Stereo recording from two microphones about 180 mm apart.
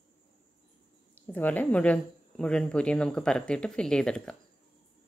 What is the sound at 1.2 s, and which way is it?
A woman's voice, 10° left (ahead or behind).